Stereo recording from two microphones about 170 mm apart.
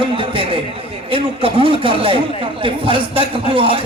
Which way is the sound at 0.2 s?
30° right (ahead or behind).